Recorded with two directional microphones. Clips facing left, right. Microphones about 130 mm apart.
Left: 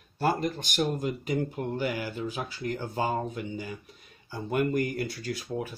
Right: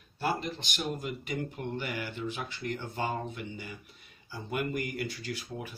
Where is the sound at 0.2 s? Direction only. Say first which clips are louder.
Left 5 dB; 40° left (ahead or behind).